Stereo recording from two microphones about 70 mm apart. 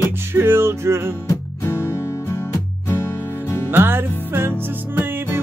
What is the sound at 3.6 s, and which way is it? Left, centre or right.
Music, right.